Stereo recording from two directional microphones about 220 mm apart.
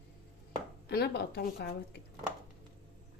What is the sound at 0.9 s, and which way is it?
Speech, 45° left (ahead or behind).